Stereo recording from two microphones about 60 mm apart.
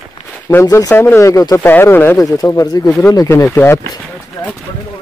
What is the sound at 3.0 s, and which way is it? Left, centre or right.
Speech, left.